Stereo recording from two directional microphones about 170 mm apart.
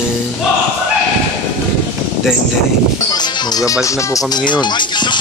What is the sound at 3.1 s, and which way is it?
Speech, 25° left (ahead or behind).